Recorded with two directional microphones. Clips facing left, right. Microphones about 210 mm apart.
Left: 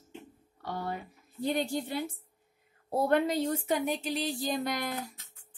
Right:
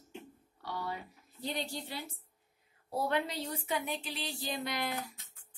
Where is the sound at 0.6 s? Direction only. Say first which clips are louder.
Left 4 dB; 50° left (ahead or behind).